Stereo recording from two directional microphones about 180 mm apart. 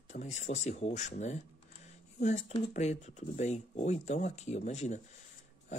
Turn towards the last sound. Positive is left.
turn(degrees=40)  # may be behind; listen again after turning